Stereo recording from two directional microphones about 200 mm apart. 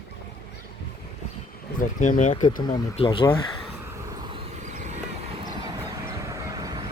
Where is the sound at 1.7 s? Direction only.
40° left (ahead or behind).